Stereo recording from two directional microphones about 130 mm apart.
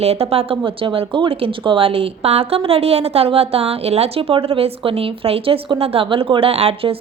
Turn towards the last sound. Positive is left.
turn(degrees=-45)  # may be behind; listen again after turning